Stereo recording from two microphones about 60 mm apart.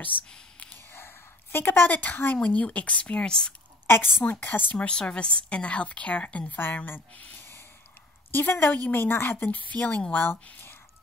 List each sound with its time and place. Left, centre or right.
0.1 s a woman's voice: left
0.9 s a sound: left
2.3 s a woman's voice: left
3.8 s a woman's voice: left
4.2 s a woman's voice: left
4.7 s a woman's voice: centre
8.3 s a woman's voice: left
10.1 s a woman's voice: left